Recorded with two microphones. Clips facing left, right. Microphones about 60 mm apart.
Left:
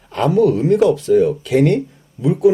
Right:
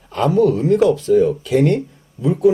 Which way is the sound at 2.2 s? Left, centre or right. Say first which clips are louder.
Left 1 dB; right.